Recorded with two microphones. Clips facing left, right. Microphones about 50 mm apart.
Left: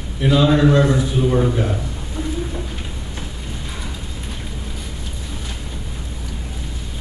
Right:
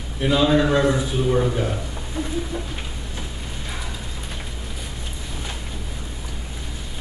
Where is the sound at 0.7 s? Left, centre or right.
Centre.